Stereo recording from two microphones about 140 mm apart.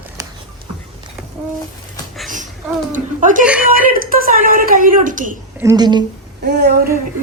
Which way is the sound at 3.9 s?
90° right.